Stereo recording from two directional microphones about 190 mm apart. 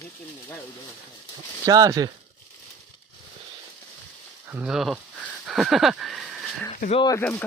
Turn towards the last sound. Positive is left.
turn(degrees=10)  # may be behind; listen again after turning